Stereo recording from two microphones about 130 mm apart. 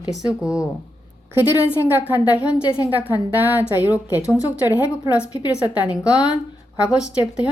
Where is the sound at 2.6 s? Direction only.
30° left (ahead or behind).